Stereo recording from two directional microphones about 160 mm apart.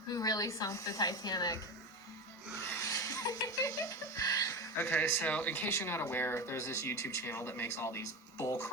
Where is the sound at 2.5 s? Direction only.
15° left (ahead or behind).